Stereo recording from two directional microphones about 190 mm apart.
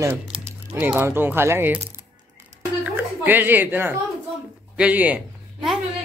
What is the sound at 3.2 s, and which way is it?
A man's voice, 10° right (ahead or behind).